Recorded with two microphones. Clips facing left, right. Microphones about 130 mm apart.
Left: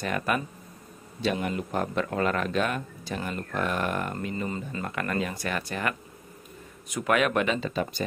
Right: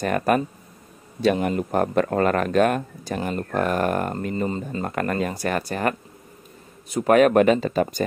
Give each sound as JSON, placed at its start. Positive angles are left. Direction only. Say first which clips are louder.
{"t": 0.0, "sound": "speech", "louder": "right 7 dB", "side_deg": -45}
{"t": 4.5, "sound": "speech", "louder": "right 6 dB", "side_deg": -30}
{"t": 4.9, "sound": "speech", "louder": "right 5 dB", "side_deg": -45}